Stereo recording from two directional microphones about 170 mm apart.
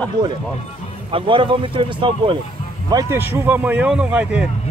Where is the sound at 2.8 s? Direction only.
20° right (ahead or behind).